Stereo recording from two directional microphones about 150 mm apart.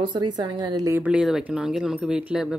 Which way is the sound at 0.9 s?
10° right (ahead or behind).